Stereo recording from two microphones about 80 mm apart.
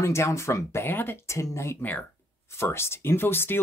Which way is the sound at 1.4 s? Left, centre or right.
Left.